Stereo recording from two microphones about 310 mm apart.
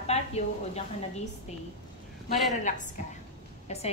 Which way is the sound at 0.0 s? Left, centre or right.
Left.